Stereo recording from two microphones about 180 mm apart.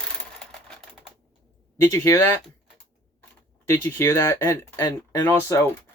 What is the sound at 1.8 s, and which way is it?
Speech, 15° left (ahead or behind).